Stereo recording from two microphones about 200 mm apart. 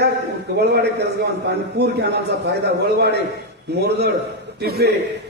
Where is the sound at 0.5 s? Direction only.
55° right (ahead or behind).